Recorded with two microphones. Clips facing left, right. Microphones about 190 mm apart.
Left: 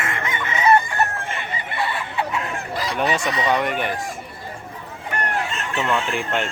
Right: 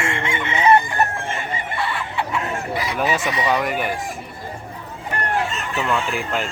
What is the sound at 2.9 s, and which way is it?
Speech, 5° right (ahead or behind).